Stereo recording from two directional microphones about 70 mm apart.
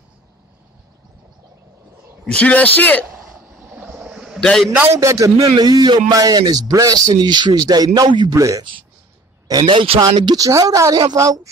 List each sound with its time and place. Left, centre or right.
2.2 s speech: centre
4.1 s a sound: centre
4.4 s a man's voice: centre
4.9 s a man's voice: right
5.6 s speech: right
7.2 s speech: right
8.4 s a man's voice: right
9.5 s speech: right